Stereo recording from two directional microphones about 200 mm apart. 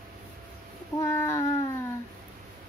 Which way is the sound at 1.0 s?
10° left (ahead or behind).